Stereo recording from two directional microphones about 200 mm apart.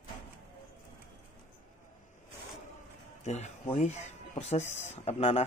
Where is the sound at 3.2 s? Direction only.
35° left (ahead or behind).